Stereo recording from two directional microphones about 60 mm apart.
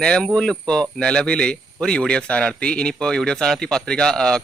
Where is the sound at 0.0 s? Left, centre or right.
Centre.